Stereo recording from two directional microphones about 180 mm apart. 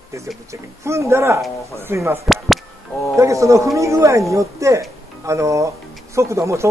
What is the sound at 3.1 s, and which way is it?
Speech, 15° right (ahead or behind).